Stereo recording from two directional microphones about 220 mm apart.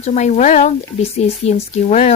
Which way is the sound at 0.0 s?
30° left (ahead or behind).